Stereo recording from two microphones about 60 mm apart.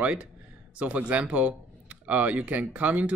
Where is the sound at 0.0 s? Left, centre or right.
Right.